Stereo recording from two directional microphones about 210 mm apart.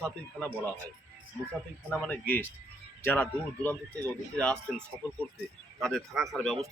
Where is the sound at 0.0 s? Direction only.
5° left (ahead or behind).